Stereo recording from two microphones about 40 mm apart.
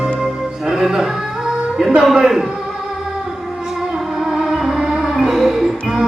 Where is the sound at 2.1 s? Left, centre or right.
Centre.